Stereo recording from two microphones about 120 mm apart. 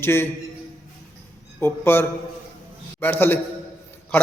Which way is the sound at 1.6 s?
20° left (ahead or behind).